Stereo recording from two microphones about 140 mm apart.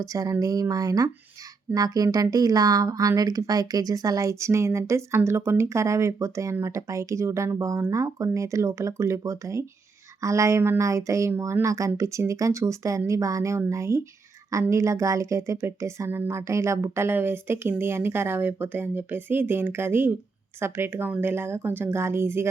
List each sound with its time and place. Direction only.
0.0 s a woman's voice: 25° right (ahead or behind)